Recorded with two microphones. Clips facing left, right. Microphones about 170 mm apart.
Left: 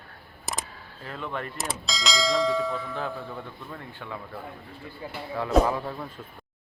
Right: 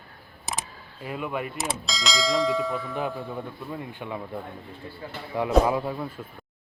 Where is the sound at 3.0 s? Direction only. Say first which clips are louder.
Right 3 dB; 15° right (ahead or behind).